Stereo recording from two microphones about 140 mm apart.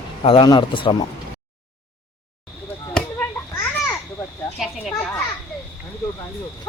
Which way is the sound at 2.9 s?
10° left (ahead or behind).